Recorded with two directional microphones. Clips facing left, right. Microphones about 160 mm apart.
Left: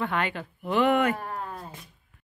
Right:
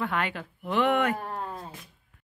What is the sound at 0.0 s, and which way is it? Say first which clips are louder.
A woman's voice: left 1 dB; centre (ahead or behind).